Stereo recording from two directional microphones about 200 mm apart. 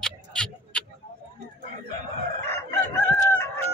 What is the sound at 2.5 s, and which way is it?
Chicken, 10° left (ahead or behind).